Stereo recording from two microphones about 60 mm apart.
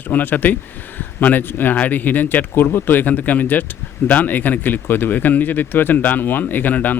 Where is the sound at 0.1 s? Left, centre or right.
Left.